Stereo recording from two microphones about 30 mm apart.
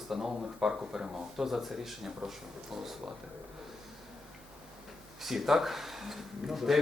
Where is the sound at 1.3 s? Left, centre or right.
Centre.